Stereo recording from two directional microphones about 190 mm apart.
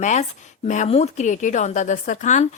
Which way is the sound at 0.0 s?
40° left (ahead or behind).